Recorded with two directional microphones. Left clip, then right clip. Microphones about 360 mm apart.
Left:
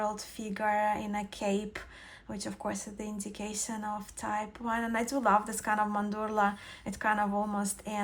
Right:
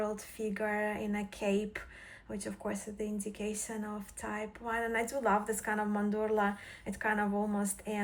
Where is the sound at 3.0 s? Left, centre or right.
Left.